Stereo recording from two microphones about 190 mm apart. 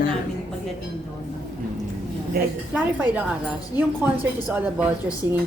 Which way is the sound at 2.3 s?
55° right (ahead or behind).